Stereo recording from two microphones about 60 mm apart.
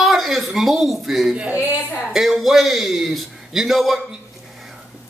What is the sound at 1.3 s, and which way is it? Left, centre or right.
Speech, centre.